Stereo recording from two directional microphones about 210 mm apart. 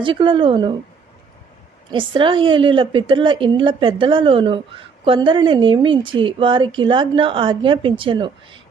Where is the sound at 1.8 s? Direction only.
25° right (ahead or behind).